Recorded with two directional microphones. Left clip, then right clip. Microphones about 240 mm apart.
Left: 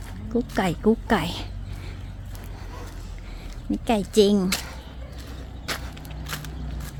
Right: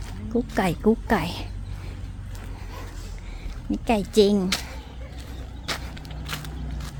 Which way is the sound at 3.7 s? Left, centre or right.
Centre.